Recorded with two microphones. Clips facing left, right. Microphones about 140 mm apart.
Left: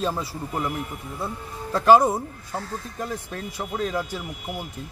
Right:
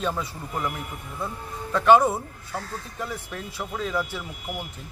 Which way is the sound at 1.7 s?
35° left (ahead or behind).